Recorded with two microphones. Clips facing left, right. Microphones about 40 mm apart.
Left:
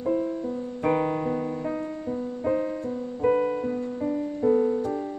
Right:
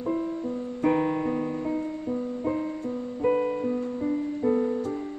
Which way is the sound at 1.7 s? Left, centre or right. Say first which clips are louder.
Right 1 dB; centre.